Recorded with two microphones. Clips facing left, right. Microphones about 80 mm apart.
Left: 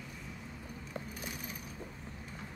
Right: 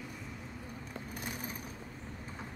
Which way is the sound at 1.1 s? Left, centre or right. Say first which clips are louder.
Right 2 dB; right.